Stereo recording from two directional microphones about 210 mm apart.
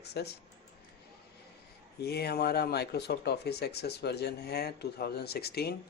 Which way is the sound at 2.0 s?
50° left (ahead or behind).